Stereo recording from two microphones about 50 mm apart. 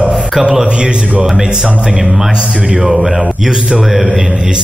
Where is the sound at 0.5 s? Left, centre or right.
Centre.